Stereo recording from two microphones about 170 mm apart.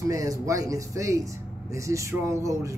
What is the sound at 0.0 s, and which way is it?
A man's voice, 20° right (ahead or behind).